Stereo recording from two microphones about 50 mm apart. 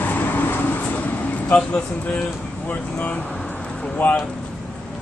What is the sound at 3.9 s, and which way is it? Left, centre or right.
Speech, left.